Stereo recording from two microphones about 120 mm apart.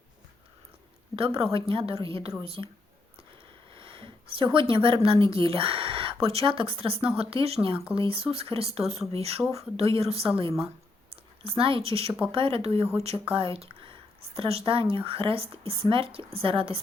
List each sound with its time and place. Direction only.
1.1 s speech: 50° right (ahead or behind)
3.8 s sniff: 50° right (ahead or behind)
4.7 s speech: 50° right (ahead or behind)